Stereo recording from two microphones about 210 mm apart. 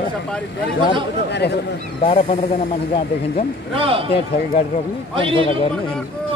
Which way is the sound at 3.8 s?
25° right (ahead or behind).